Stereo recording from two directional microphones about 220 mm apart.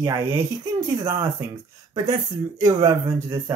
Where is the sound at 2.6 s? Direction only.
15° right (ahead or behind).